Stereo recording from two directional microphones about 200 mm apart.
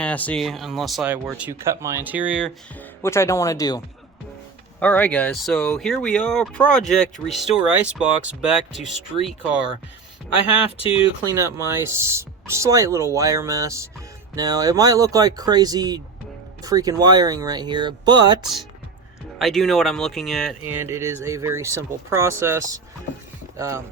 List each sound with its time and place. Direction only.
0.0 s speech: 5° left (ahead or behind)
2.7 s speech: 15° left (ahead or behind)
10.8 s speech: 25° left (ahead or behind)
11.3 s speech: 15° right (ahead or behind)
19.4 s speech: centre (ahead or behind)
20.8 s speech: 10° right (ahead or behind)